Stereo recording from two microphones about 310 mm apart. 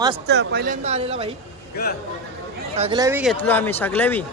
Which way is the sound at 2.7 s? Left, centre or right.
Centre.